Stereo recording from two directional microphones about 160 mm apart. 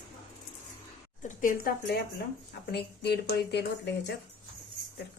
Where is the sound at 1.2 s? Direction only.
60° left (ahead or behind).